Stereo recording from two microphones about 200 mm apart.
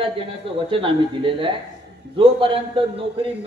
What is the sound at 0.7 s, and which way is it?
Speech, 25° right (ahead or behind).